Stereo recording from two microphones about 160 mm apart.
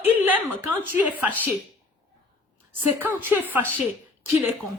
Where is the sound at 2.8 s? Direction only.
10° right (ahead or behind).